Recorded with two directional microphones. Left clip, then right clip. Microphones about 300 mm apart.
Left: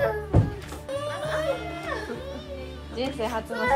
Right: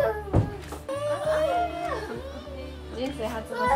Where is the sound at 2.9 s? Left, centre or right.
Centre.